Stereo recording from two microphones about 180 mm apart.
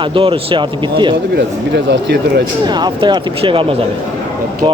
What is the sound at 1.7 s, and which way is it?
Speech, 70° right (ahead or behind).